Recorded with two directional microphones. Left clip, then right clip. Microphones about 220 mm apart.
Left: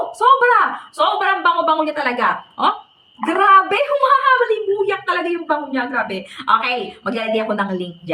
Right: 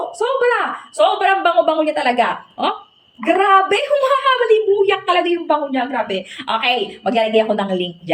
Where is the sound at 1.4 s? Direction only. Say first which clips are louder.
Right 1 dB; centre (ahead or behind).